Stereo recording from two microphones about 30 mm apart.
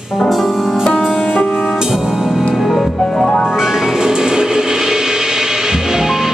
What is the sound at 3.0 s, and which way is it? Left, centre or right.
Music, left.